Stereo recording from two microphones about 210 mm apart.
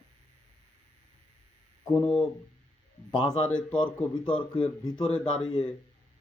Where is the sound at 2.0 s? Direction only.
5° left (ahead or behind).